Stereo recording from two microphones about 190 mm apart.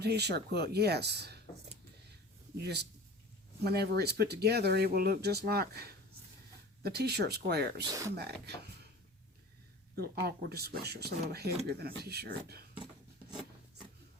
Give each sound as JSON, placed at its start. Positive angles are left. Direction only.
{"t": 0.0, "sound": "speech", "side_deg": -60}
{"t": 2.6, "sound": "speech", "side_deg": -60}
{"t": 7.9, "sound": "speech", "side_deg": -15}
{"t": 8.1, "sound": "speech", "side_deg": -60}
{"t": 9.9, "sound": "speech", "side_deg": -55}